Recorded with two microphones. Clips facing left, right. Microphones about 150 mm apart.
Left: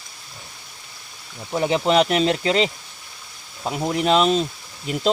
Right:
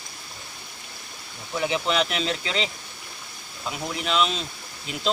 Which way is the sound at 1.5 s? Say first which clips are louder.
Left 6 dB; 40° left (ahead or behind).